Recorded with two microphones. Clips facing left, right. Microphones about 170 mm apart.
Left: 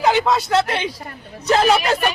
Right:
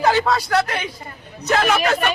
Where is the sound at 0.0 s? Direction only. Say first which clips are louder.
Left 1 dB; 20° left (ahead or behind).